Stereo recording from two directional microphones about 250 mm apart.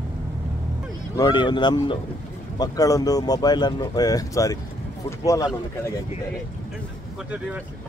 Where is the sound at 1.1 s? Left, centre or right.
Centre.